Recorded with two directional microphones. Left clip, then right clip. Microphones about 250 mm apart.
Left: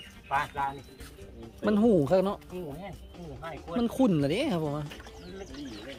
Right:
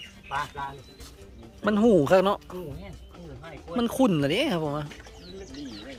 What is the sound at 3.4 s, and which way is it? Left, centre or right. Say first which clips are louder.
Speech: right 2 dB; centre.